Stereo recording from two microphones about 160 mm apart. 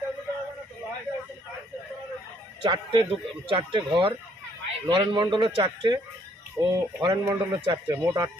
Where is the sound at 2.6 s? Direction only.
30° right (ahead or behind).